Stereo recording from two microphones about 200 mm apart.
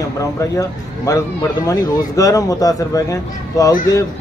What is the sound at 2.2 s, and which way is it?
Speech, 15° left (ahead or behind).